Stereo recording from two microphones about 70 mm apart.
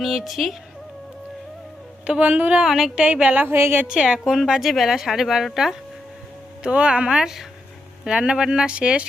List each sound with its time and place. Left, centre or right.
0.0 s speech: centre
2.0 s a woman's voice: centre
2.6 s speech: centre
3.0 s a woman's voice: centre; by 3.8 s right
3.8 s speech: centre
6.6 s speech: centre